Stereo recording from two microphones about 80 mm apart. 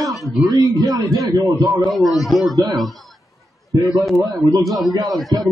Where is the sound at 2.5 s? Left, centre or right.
Right.